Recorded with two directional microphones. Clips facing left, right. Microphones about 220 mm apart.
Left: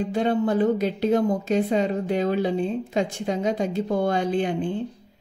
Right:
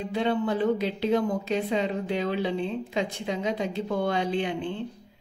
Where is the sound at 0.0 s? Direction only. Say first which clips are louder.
Left 4 dB; 45° left (ahead or behind).